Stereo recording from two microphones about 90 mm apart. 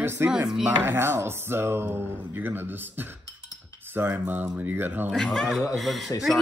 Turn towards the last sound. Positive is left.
turn(degrees=0)  # may be behind; listen again after turning